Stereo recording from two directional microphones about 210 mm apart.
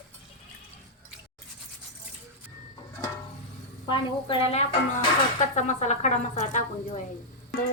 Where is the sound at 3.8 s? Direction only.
20° left (ahead or behind).